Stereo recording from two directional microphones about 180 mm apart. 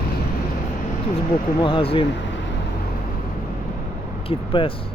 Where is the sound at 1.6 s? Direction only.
30° left (ahead or behind).